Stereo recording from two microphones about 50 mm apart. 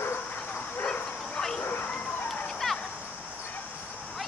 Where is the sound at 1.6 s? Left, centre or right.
Left.